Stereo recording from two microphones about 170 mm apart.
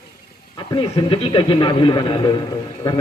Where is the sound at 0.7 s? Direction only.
30° left (ahead or behind).